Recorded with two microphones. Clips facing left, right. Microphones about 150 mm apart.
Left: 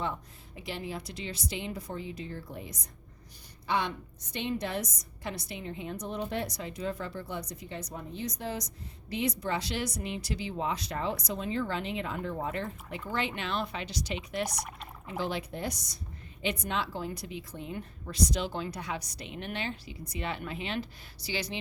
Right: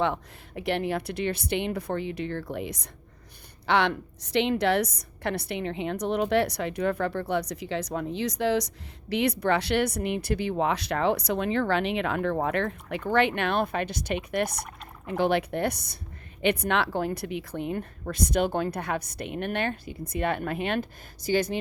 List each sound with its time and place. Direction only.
0.0 s a woman's voice: 75° right (ahead or behind); by 21.6 s 50° right (ahead or behind)